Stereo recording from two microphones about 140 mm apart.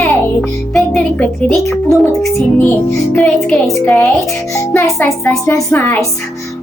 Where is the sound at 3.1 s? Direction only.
5° left (ahead or behind).